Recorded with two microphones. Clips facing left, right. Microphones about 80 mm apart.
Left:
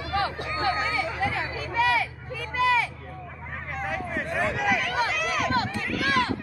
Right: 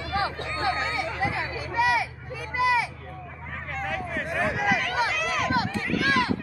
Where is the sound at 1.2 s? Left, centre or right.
Centre.